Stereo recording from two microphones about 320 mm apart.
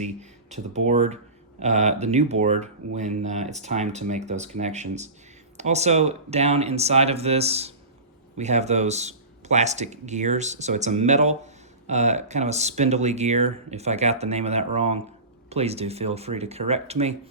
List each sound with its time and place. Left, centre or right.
0.0 s speech: right